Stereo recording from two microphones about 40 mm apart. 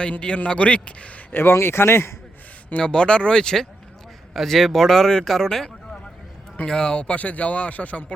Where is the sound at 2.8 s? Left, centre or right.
Left.